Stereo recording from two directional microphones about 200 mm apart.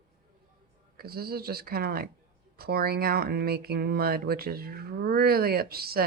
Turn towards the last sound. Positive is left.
turn(degrees=-50)  # may be behind; listen again after turning